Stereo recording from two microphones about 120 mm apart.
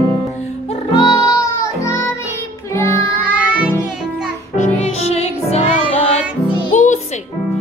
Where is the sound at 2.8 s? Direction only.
25° left (ahead or behind).